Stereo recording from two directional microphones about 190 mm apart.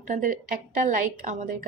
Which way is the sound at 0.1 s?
45° right (ahead or behind).